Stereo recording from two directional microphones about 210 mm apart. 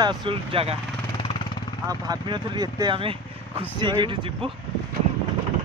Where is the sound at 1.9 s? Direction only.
20° right (ahead or behind).